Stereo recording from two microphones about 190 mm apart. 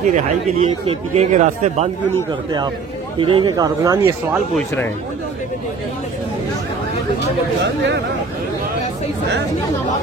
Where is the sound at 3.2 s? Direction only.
25° right (ahead or behind).